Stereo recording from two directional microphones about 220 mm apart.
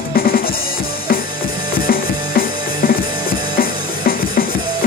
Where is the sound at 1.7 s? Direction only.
40° left (ahead or behind).